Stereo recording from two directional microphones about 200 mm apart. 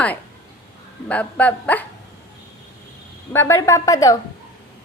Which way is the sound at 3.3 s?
15° left (ahead or behind).